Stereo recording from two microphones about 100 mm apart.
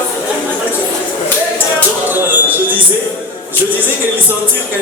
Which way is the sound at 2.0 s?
20° right (ahead or behind).